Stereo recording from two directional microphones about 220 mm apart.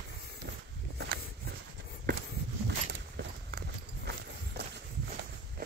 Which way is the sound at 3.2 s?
45° right (ahead or behind).